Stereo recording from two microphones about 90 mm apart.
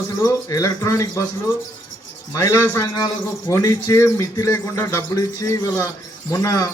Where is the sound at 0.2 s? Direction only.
40° left (ahead or behind).